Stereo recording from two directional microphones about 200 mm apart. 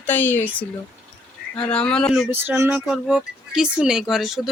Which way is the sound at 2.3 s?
10° right (ahead or behind).